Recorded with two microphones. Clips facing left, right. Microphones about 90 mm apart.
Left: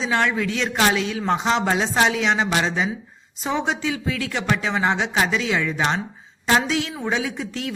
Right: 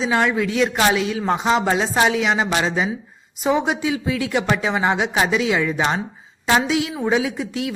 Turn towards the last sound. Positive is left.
turn(degrees=-5)  # may be behind; listen again after turning